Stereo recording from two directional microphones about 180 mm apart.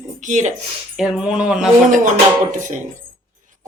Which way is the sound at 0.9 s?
Centre (ahead or behind).